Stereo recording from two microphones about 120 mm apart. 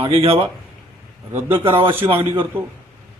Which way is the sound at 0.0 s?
50° right (ahead or behind).